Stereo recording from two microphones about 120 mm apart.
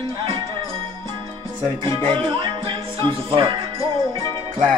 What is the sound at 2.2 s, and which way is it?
Music, 45° right (ahead or behind).